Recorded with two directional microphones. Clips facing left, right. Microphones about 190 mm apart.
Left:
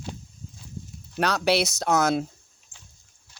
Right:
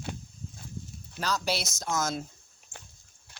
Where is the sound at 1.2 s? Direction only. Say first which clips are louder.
Left 8 dB; 65° left (ahead or behind).